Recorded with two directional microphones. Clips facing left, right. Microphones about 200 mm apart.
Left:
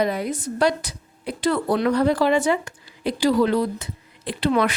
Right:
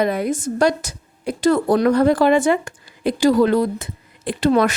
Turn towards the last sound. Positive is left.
turn(degrees=-45)  # may be behind; listen again after turning